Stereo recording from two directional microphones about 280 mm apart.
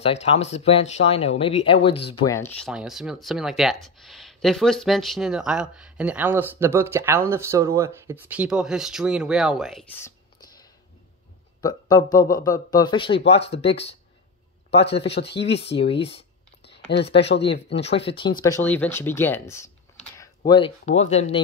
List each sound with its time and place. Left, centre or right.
0.0 s speech: left
15.0 s speech: left
15.6 s speech: centre
16.6 s a sound: left
17.2 s speech: left
17.7 s speech: left